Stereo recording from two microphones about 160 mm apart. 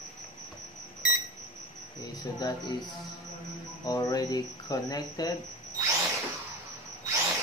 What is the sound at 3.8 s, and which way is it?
Mantra, 25° left (ahead or behind).